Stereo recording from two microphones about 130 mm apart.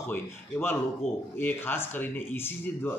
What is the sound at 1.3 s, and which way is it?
A man's voice, 15° left (ahead or behind).